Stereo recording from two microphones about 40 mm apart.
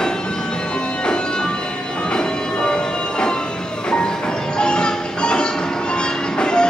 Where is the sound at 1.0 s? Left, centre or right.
Left.